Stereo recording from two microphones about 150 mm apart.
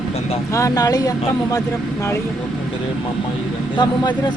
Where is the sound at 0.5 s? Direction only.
20° left (ahead or behind).